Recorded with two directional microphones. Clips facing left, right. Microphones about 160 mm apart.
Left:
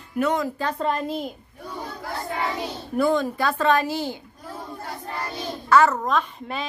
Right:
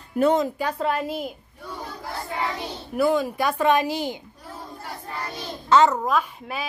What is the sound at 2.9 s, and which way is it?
A woman's voice, 10° right (ahead or behind).